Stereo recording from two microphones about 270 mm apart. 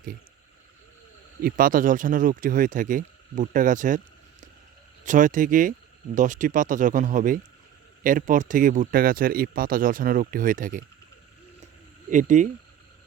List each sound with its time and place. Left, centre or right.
1.4 s speech: right
12.1 s speech: right